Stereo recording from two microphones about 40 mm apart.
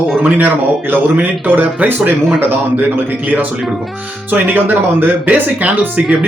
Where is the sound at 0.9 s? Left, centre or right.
Right.